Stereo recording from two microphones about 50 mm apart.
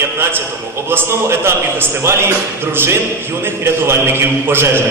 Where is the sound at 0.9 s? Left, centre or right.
Right.